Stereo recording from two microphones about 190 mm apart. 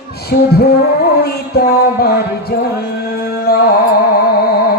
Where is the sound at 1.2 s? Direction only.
55° left (ahead or behind).